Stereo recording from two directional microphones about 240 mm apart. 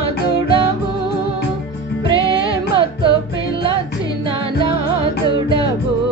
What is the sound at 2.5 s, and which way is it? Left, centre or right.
Music, right.